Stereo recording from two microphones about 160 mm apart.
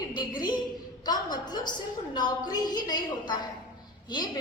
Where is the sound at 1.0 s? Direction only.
25° left (ahead or behind).